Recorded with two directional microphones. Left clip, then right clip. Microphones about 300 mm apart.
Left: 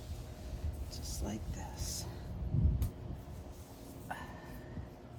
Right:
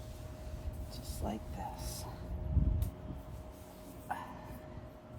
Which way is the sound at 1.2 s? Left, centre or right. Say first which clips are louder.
Right 4 dB; centre.